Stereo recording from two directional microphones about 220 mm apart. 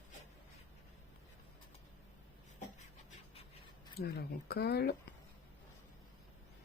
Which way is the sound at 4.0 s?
45° left (ahead or behind).